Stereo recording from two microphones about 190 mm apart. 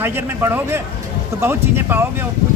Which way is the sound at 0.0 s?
10° right (ahead or behind).